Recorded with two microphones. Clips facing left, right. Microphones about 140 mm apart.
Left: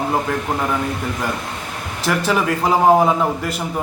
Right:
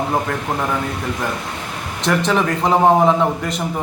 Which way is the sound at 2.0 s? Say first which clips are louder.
Right 1 dB; 5° left (ahead or behind).